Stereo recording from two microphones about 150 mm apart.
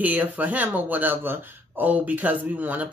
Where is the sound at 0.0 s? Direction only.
10° right (ahead or behind).